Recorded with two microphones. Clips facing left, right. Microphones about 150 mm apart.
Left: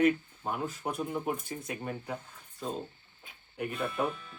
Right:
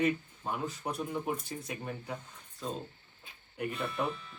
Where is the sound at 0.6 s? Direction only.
50° left (ahead or behind).